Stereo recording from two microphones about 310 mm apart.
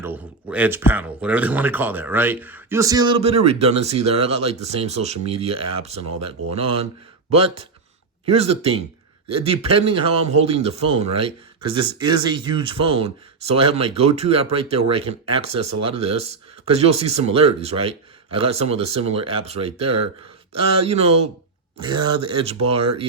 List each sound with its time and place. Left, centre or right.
0.0 s speech: centre